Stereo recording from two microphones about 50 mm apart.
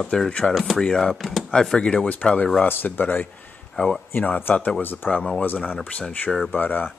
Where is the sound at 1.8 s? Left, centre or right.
Centre.